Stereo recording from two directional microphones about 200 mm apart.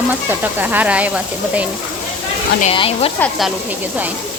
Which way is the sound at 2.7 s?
25° left (ahead or behind).